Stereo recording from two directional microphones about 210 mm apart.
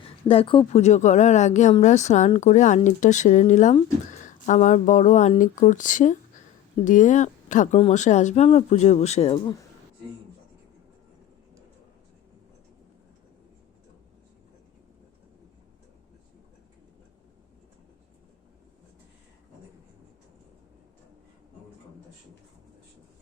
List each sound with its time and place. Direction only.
0.0 s speech: 25° left (ahead or behind)